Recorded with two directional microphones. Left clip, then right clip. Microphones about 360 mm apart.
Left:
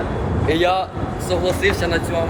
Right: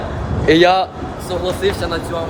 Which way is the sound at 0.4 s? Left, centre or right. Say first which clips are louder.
Right 7 dB; right.